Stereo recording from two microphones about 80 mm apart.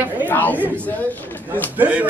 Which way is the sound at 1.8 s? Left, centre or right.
Centre.